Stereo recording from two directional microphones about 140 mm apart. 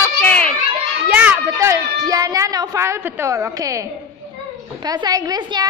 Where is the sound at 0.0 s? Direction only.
10° left (ahead or behind).